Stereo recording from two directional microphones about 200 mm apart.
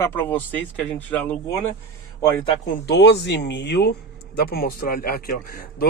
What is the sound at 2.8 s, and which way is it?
Speech, 60° left (ahead or behind).